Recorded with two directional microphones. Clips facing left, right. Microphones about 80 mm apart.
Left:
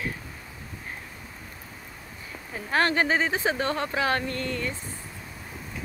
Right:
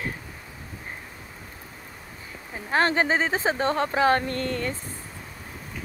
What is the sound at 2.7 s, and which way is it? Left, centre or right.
Speech, right.